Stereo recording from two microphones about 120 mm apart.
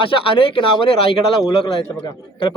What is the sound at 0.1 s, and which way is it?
A man's voice, 45° left (ahead or behind).